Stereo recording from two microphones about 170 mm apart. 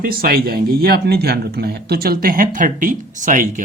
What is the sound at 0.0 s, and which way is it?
Speech, 60° right (ahead or behind).